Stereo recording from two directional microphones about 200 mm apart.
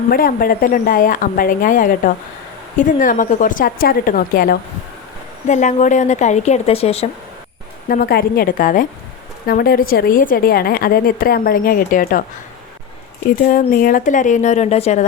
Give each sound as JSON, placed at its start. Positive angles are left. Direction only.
{"t": 0.1, "sound": "a woman's voice", "side_deg": 45}
{"t": 7.9, "sound": "a woman's voice", "side_deg": 50}
{"t": 13.3, "sound": "speech", "side_deg": 45}